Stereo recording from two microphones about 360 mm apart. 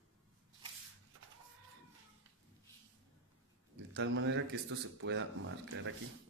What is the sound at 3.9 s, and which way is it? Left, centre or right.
Speech, right.